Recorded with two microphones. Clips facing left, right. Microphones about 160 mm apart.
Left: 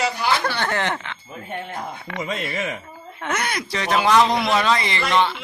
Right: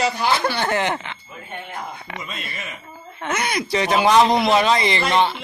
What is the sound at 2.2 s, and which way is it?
Speech, 80° left.